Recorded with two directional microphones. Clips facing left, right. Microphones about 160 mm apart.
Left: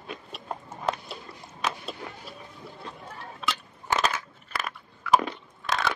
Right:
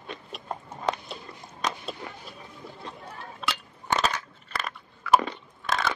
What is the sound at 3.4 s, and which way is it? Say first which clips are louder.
Crushing: left 1 dB; centre (ahead or behind).